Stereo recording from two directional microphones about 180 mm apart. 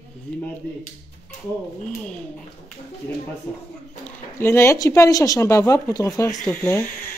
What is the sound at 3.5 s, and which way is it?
A woman's voice, 10° left (ahead or behind).